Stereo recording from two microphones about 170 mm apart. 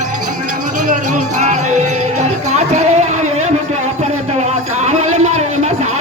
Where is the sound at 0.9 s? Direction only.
45° right (ahead or behind).